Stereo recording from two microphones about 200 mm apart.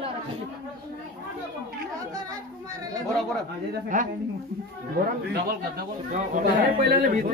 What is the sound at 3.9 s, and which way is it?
Speech, 40° right (ahead or behind).